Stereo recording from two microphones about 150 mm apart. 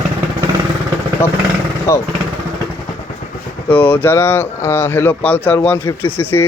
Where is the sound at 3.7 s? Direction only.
10° left (ahead or behind).